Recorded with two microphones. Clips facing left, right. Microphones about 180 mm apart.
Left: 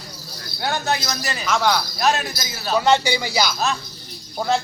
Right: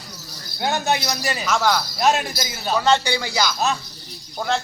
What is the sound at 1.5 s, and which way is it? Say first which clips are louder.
Speech: left 1 dB; centre (ahead or behind).